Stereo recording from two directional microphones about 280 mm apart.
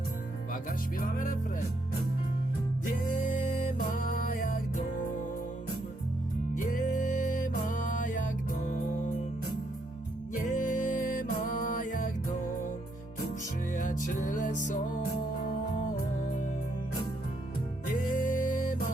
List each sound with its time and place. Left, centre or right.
0.5 s music: left
2.8 s music: left
6.6 s music: left
10.3 s music: left
13.7 s music: left
17.8 s music: left